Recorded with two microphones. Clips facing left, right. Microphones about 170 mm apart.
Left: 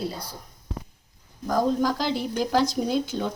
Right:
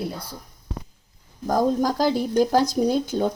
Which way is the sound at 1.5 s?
45° right (ahead or behind).